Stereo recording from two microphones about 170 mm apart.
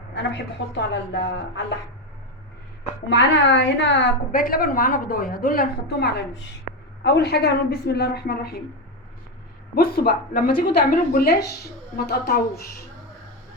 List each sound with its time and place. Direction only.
0.1 s a woman's voice: 90° left
3.1 s a woman's voice: 90° left
4.3 s a woman's voice: 55° left (ahead or behind)
9.7 s a woman's voice: 60° left (ahead or behind)